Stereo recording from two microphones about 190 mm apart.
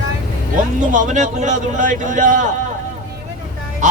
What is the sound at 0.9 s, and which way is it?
A man's voice, 40° right (ahead or behind).